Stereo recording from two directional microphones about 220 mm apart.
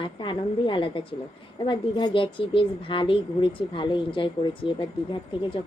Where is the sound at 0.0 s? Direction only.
20° left (ahead or behind).